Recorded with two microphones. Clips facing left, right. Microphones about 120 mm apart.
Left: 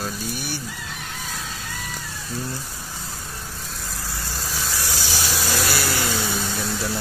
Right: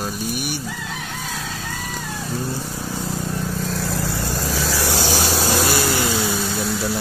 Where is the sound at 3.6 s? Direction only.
85° right; by 5.2 s 60° right (ahead or behind).